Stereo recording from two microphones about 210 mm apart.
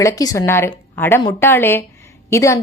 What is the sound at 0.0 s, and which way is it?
Speech, 15° left (ahead or behind).